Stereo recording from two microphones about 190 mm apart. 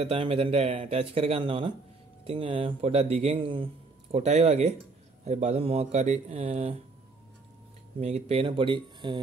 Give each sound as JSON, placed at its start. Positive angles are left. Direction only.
{"t": 0.0, "sound": "speech", "side_deg": -30}
{"t": 8.0, "sound": "speech", "side_deg": -35}